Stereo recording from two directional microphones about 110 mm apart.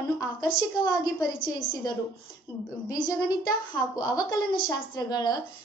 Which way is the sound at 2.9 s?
35° left (ahead or behind).